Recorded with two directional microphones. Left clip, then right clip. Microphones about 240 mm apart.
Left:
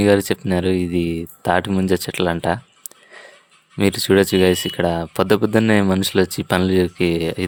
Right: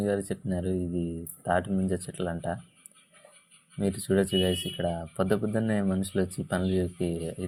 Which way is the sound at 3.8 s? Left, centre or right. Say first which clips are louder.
Left 12 dB; left.